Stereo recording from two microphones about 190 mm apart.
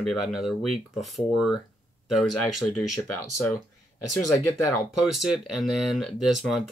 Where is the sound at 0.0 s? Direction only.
Centre (ahead or behind).